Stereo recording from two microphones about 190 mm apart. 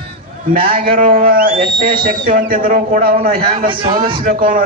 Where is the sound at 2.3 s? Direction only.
45° right (ahead or behind).